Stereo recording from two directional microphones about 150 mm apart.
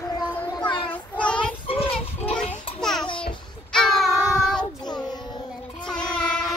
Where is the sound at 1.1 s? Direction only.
10° left (ahead or behind).